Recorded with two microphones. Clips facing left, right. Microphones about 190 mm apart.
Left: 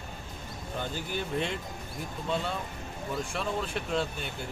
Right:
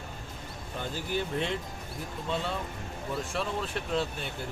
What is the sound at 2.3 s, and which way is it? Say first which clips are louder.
Speech: left 1 dB; centre (ahead or behind).